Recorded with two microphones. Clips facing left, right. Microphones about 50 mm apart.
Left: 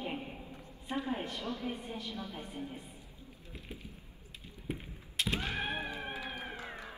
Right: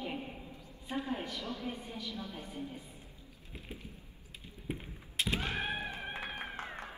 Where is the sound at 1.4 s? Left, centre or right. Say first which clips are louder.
Left 2 dB; left.